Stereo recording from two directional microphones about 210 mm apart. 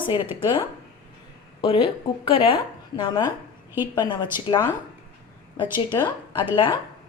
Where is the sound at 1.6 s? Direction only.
25° left (ahead or behind).